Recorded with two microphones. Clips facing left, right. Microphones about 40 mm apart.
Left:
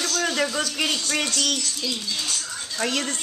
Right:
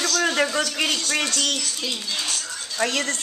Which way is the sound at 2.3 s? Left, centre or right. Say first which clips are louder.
Right 1 dB; centre.